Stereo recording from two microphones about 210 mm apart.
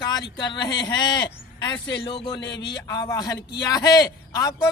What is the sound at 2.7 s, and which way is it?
A man's voice, 15° left (ahead or behind).